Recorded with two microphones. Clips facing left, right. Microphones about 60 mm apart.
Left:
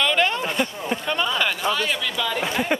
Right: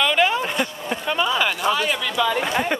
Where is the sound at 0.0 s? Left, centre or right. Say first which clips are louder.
Right 2 dB; centre.